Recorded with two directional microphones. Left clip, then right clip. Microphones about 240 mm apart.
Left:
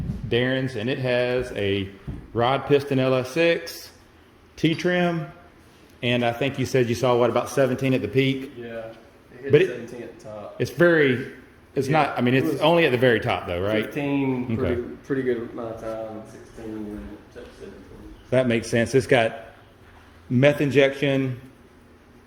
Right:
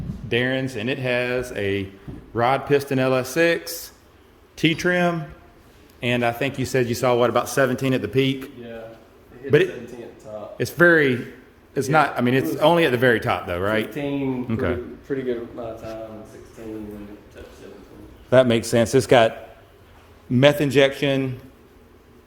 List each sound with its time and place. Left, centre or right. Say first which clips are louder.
0.3 s a man's voice: right 1 dB; centre
10.6 s a man's voice: right 2 dB; centre
13.9 s speech: left 1 dB; centre
14.5 s a man's voice: right 3 dB; right
15.1 s speech: even; left
18.3 s a man's voice: right 5 dB; right
20.3 s a man's voice: right 2 dB; right